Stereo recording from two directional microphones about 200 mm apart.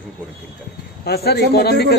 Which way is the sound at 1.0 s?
50° left (ahead or behind).